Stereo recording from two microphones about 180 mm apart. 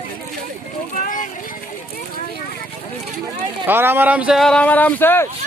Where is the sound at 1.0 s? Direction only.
50° left (ahead or behind).